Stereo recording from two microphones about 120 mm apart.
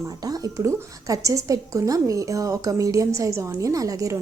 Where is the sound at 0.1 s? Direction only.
30° right (ahead or behind).